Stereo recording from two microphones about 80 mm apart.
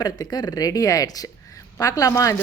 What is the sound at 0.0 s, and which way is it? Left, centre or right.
A woman's voice, left.